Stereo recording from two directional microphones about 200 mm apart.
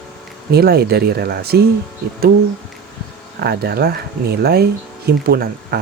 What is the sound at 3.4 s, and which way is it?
Speech, 50° right (ahead or behind).